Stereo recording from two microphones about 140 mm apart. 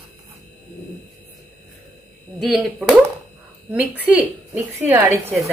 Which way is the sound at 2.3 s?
Centre (ahead or behind).